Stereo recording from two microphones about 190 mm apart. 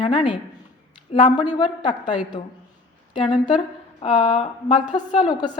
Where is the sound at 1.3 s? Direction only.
25° left (ahead or behind).